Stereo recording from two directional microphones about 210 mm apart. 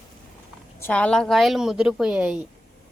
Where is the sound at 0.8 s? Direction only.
5° left (ahead or behind).